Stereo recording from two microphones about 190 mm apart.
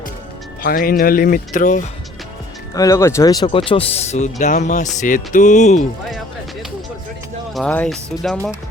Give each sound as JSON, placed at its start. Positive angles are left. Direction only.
{"t": 0.6, "sound": "speech", "side_deg": 50}
{"t": 2.7, "sound": "speech", "side_deg": 15}
{"t": 6.1, "sound": "music", "side_deg": 0}
{"t": 7.5, "sound": "speech", "side_deg": 5}